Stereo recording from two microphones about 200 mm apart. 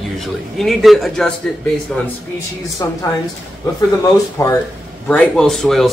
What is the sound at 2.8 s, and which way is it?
Speech, 20° left (ahead or behind).